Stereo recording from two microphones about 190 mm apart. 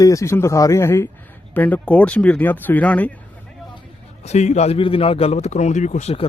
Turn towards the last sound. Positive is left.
turn(degrees=30)  # may be behind; listen again after turning